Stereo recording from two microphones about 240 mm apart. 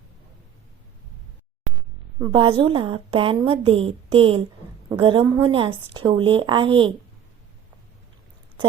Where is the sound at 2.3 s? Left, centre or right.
Centre.